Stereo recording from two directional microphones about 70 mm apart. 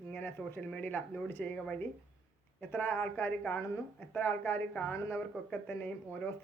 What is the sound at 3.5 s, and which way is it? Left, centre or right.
A woman's voice, left.